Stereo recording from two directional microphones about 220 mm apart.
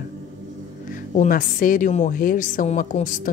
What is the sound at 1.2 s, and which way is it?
A woman's voice, 35° left (ahead or behind).